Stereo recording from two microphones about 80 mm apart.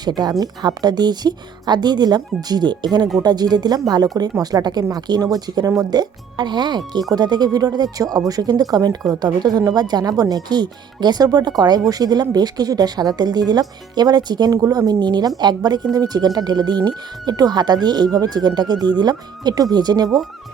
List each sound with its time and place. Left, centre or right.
0.0 s speech: right
5.9 s speech: right
14.9 s speech: right